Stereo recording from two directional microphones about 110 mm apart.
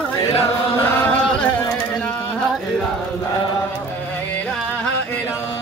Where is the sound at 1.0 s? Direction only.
10° left (ahead or behind).